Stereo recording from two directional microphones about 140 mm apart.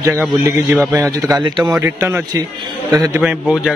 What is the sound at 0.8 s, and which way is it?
Speech, 20° right (ahead or behind).